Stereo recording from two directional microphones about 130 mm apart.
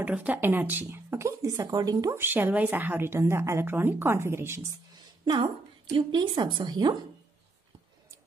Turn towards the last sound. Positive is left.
turn(degrees=-35)  # may be behind; listen again after turning